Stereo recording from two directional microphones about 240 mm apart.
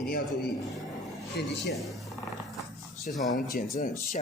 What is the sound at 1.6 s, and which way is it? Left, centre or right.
Speech, centre.